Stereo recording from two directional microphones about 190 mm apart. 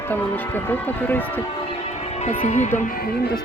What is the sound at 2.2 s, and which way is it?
Speech, 40° left (ahead or behind).